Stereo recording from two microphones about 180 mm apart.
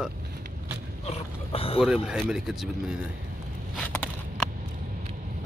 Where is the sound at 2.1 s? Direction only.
5° right (ahead or behind).